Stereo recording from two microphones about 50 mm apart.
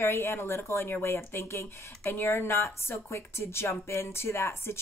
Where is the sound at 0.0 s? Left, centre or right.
Left.